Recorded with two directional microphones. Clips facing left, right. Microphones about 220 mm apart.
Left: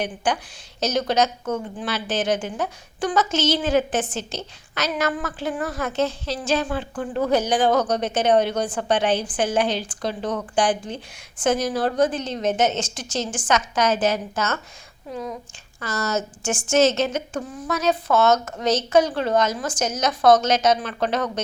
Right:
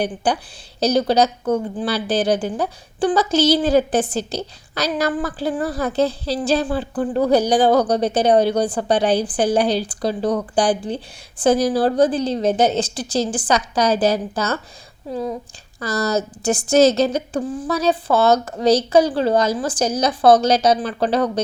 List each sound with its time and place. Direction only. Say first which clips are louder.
0.2 s a woman's voice: right 3 dB; 35° right (ahead or behind)